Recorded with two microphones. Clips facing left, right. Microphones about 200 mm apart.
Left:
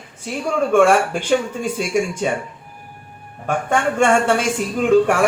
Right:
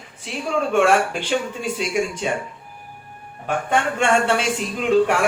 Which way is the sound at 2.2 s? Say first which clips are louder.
Left 3 dB; 50° left (ahead or behind).